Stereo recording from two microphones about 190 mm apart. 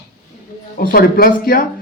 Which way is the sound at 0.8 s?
50° left (ahead or behind).